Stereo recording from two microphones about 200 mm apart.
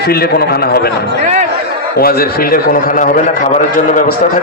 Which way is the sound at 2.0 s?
45° left (ahead or behind).